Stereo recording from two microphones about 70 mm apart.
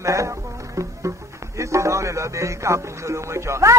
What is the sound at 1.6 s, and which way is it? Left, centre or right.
Speech, right.